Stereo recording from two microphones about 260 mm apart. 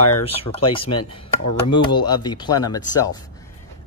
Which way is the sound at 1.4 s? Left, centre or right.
Left.